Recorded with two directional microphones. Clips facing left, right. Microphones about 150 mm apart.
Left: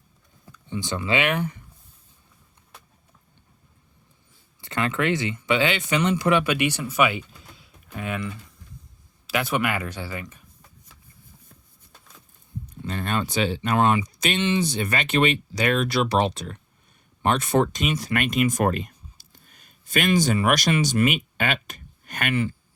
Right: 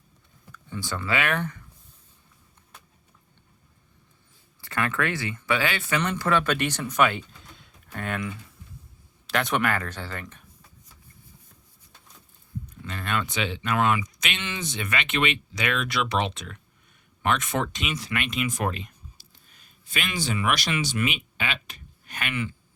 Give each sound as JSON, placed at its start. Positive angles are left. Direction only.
{"t": 0.5, "sound": "speech", "side_deg": 20}
{"t": 4.6, "sound": "speech", "side_deg": 20}
{"t": 12.7, "sound": "speech", "side_deg": 35}